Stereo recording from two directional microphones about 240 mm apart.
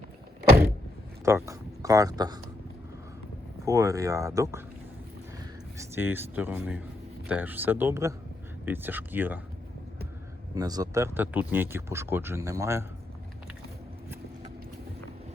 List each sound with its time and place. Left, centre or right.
1.2 s speech: centre
3.7 s speech: centre
5.9 s speech: centre
10.5 s speech: centre